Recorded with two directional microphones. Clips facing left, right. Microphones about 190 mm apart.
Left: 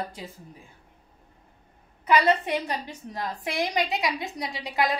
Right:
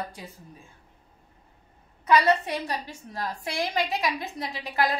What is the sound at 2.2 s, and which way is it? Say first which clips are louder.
A woman's voice: left 2 dB; 20° left (ahead or behind).